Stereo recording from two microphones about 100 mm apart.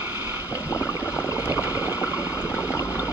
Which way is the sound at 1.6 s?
20° right (ahead or behind).